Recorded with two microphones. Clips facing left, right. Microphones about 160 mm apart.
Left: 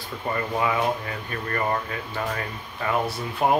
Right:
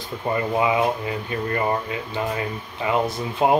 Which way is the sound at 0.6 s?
20° right (ahead or behind).